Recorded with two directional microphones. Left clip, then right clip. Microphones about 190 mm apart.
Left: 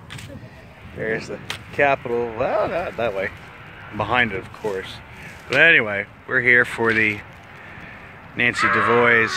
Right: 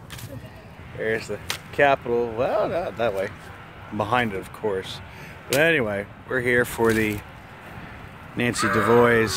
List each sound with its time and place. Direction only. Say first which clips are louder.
1.0 s speech: even; 25° left (ahead or behind)
3.0 s speech: left 1 dB; 10° right (ahead or behind)
5.5 s speech: left 5 dB; 20° right (ahead or behind)
8.4 s speech: left 5 dB; 35° right (ahead or behind)